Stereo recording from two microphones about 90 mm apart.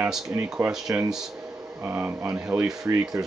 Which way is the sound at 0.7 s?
5° right (ahead or behind).